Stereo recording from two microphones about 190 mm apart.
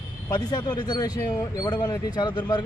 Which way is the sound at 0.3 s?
20° left (ahead or behind).